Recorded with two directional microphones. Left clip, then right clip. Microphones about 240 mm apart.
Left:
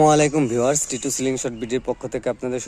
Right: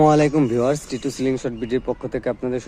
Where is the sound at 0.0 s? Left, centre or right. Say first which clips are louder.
Even; left.